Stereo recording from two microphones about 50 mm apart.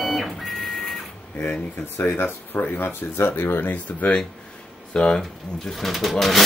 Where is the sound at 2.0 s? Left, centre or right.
Left.